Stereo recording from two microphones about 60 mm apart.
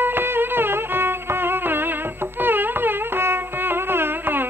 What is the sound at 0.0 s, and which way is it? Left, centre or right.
Music, right.